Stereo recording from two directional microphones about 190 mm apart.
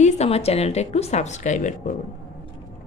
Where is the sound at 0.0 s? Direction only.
35° left (ahead or behind).